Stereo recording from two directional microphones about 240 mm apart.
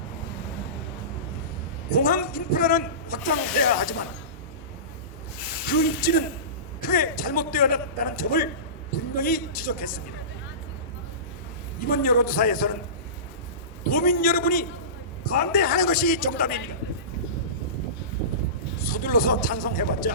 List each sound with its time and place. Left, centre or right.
2.0 s speech: left
5.6 s speech: left
11.9 s speech: left
13.8 s speech: left
18.8 s speech: left